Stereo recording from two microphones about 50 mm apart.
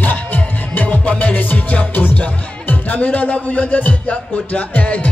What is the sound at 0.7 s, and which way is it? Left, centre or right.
Music, left.